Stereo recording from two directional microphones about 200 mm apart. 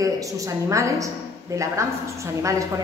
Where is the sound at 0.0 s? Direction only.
15° right (ahead or behind).